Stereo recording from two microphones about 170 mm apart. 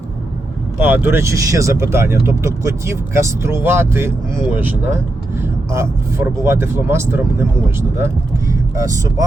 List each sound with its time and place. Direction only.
0.8 s speech: 10° right (ahead or behind)
5.7 s speech: 15° right (ahead or behind)